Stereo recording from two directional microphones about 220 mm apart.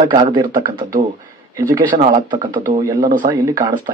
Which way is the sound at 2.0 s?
20° right (ahead or behind).